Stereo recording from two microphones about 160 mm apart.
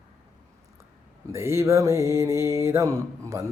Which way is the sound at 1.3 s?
15° right (ahead or behind).